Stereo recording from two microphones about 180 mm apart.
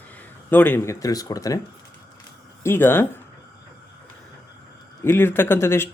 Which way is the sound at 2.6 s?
10° left (ahead or behind).